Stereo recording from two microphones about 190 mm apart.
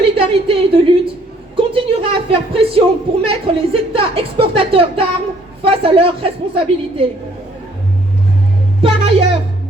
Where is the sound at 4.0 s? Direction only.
30° right (ahead or behind).